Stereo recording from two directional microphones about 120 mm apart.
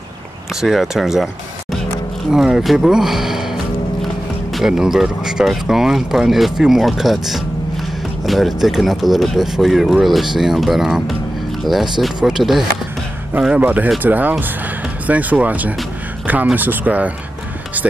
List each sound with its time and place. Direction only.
0.6 s speech: centre (ahead or behind)
4.6 s speech: 5° right (ahead or behind)